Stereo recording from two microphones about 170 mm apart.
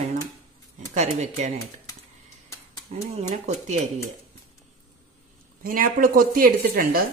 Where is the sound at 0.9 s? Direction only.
40° right (ahead or behind).